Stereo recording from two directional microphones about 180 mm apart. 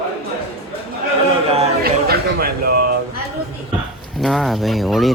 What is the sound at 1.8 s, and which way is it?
Speech, 60° right (ahead or behind).